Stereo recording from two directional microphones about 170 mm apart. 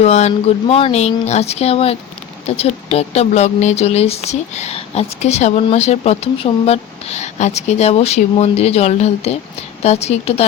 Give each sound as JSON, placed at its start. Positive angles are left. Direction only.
{"t": 0.0, "sound": "speech", "side_deg": 40}